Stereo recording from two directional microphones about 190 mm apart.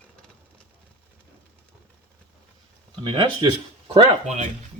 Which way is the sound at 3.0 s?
25° right (ahead or behind).